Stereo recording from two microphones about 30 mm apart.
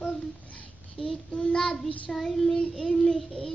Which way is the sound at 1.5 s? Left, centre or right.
Left.